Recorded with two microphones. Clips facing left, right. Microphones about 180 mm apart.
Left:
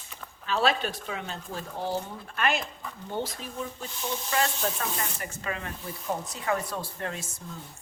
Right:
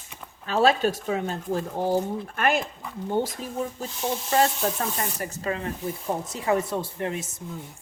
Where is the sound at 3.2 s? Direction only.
40° right (ahead or behind).